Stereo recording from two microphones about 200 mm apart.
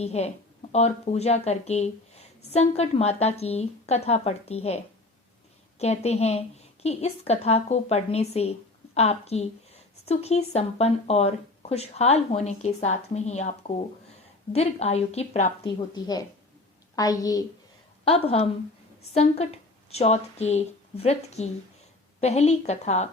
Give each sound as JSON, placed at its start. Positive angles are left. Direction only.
{"t": 0.0, "sound": "speech", "side_deg": 30}
{"t": 5.8, "sound": "speech", "side_deg": 35}
{"t": 16.0, "sound": "a woman's voice", "side_deg": 20}
{"t": 18.0, "sound": "a woman's voice", "side_deg": 30}